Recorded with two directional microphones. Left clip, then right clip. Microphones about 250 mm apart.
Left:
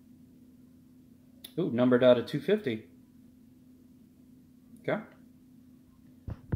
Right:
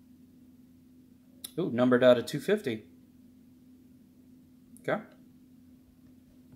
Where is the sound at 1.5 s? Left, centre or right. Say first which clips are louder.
Even; centre.